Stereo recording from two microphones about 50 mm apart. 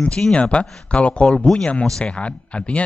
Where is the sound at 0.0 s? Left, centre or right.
Left.